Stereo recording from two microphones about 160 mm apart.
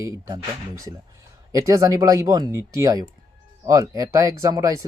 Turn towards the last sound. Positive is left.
turn(degrees=-20)  # may be behind; listen again after turning